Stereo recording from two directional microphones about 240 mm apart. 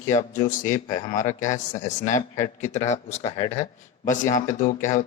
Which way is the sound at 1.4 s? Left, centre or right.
Left.